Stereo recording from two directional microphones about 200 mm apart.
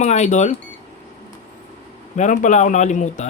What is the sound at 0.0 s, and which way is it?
Speech, 35° left (ahead or behind).